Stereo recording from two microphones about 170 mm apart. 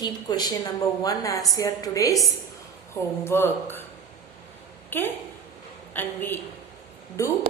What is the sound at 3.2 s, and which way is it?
Speech, 15° left (ahead or behind).